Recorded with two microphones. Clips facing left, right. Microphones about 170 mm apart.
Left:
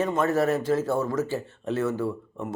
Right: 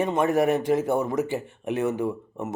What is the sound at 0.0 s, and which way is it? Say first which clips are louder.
Speech: right 2 dB; 15° right (ahead or behind).